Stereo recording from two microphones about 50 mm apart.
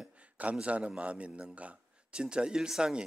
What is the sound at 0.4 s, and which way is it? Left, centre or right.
A man's voice, right.